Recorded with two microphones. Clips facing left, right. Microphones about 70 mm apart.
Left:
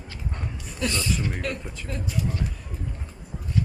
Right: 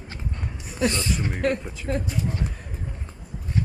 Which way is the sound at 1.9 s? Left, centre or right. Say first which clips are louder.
Right 3 dB; right.